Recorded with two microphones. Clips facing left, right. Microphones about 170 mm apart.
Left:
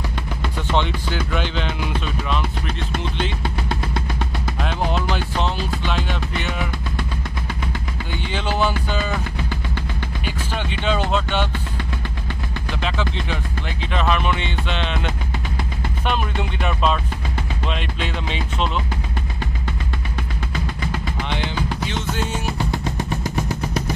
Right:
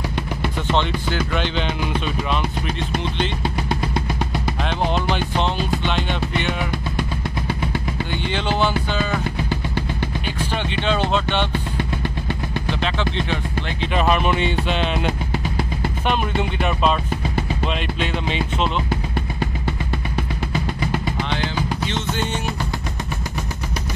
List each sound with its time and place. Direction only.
0.7 s speech: 5° left (ahead or behind)
2.3 s speech: 10° right (ahead or behind)
3.6 s music: 15° right (ahead or behind)
5.9 s music: 5° left (ahead or behind)
8.3 s speech: 10° left (ahead or behind)
9.5 s music: 15° right (ahead or behind)
10.2 s speech: 5° left (ahead or behind)
13.9 s speech: 15° right (ahead or behind)
16.1 s music: centre (ahead or behind)
18.0 s music: centre (ahead or behind)
21.8 s music: 5° left (ahead or behind)